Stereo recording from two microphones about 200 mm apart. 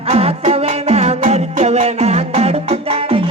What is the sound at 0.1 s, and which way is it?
Music, 30° right (ahead or behind).